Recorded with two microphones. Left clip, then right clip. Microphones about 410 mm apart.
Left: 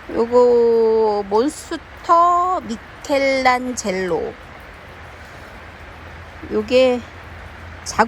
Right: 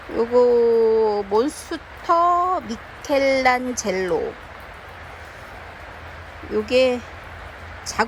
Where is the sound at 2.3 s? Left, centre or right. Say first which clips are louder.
Left 2 dB; centre.